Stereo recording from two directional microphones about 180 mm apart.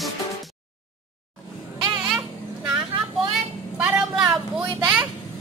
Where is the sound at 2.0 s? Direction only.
5° right (ahead or behind).